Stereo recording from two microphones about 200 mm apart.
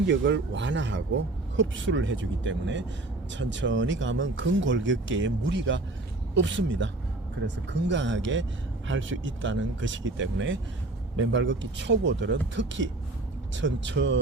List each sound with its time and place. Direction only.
0.1 s speech: 65° right (ahead or behind)